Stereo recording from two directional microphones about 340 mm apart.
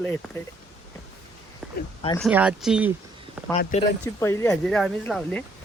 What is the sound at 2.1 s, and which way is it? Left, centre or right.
Speech, centre.